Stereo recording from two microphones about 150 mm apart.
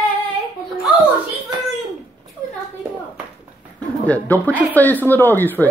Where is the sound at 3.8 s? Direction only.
10° left (ahead or behind).